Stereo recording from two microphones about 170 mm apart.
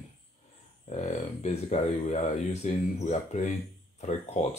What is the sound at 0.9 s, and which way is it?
Speech, 45° left (ahead or behind).